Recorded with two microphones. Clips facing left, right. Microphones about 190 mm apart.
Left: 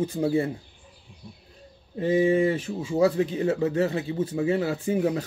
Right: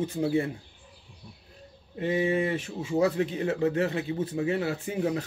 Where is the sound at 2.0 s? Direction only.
35° left (ahead or behind).